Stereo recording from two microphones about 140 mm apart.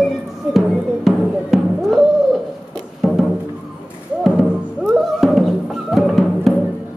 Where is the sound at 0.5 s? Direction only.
Centre (ahead or behind).